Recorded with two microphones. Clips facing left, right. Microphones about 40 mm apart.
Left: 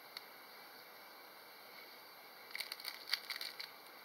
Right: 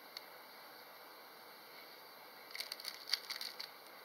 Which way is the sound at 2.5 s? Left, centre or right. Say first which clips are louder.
Left 2 dB; centre.